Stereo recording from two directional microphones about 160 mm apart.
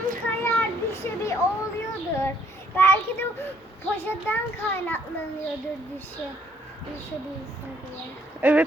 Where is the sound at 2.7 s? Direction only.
15° left (ahead or behind).